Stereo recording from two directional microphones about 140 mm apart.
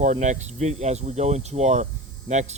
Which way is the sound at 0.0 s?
60° right (ahead or behind).